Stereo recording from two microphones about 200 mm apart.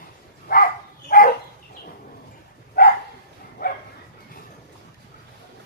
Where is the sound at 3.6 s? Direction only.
45° left (ahead or behind).